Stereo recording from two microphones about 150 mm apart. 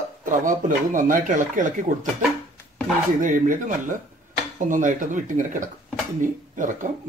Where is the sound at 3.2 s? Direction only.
60° right (ahead or behind).